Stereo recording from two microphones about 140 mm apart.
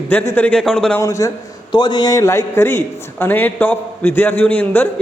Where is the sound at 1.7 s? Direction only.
30° left (ahead or behind).